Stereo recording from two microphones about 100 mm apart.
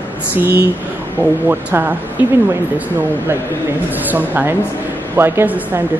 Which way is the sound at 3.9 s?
15° right (ahead or behind).